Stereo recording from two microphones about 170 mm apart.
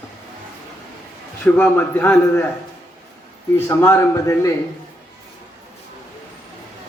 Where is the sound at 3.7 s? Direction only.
15° left (ahead or behind).